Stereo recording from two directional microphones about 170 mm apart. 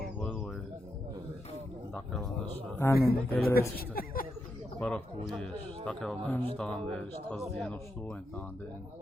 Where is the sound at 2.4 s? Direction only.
15° left (ahead or behind).